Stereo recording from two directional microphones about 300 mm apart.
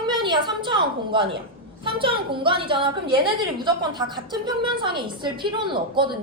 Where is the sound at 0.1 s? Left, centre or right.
Centre.